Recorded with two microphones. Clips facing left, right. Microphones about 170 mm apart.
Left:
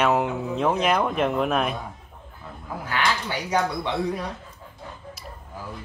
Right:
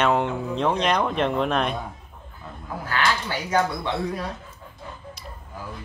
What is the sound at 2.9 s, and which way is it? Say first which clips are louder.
Speech: right 1 dB; 15° left (ahead or behind).